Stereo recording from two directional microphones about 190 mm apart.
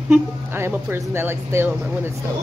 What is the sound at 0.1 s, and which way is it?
Speech, 10° right (ahead or behind).